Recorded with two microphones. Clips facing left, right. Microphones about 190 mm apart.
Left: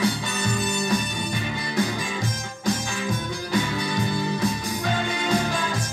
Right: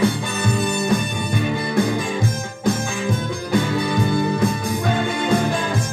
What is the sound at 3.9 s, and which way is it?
Music, 55° right (ahead or behind).